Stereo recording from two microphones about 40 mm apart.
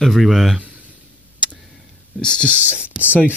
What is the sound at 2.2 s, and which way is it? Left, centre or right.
Speech, left.